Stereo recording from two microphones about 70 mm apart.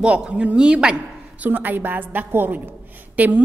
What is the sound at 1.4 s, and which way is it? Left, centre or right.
A woman's voice, right.